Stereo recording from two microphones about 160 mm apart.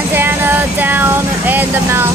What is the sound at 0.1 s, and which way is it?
Vehicle, 15° right (ahead or behind).